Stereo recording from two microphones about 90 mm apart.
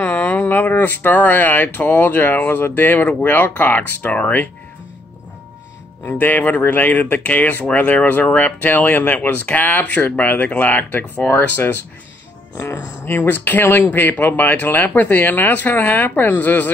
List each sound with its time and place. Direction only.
0.0 s speech: 20° left (ahead or behind)
6.0 s speech: 20° left (ahead or behind)